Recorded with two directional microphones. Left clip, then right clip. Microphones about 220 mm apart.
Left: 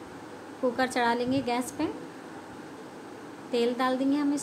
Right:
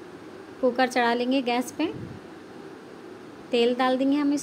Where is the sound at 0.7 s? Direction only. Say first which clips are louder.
Right 3 dB; 10° right (ahead or behind).